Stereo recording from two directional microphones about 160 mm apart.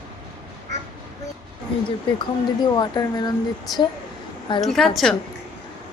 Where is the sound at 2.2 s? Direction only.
25° left (ahead or behind).